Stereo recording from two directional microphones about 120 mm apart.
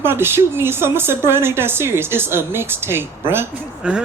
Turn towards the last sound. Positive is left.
turn(degrees=-10)  # may be behind; listen again after turning